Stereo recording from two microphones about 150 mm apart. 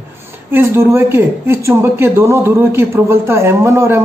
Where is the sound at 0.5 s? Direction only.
15° right (ahead or behind).